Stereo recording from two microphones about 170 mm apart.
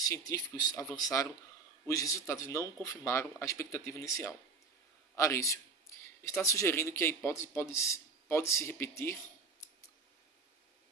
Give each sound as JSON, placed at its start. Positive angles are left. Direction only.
{"t": 0.0, "sound": "a man's voice", "side_deg": 20}